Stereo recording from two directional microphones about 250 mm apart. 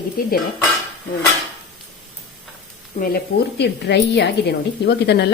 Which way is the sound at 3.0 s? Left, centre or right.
Left.